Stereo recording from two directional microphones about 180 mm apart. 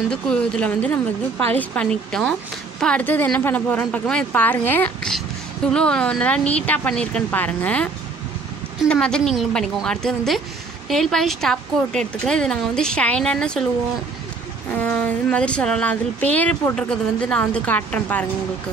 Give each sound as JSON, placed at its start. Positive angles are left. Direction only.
{"t": 0.1, "sound": "a woman's voice", "side_deg": 5}
{"t": 14.8, "sound": "speech", "side_deg": 5}